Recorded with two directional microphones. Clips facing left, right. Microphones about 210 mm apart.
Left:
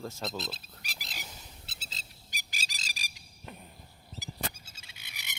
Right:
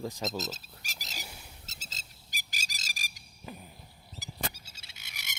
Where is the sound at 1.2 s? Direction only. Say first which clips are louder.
Right 1 dB; 10° right (ahead or behind).